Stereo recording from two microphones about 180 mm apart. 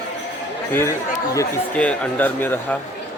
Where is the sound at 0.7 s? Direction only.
15° left (ahead or behind).